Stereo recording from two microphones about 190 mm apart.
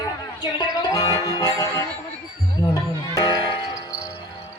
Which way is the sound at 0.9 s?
20° left (ahead or behind).